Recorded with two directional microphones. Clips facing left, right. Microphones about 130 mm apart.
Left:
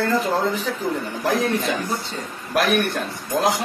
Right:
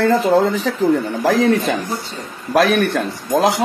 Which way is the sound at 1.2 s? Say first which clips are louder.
Right 5 dB; 90° right.